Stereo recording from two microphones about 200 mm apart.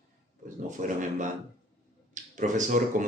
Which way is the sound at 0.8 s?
40° right (ahead or behind).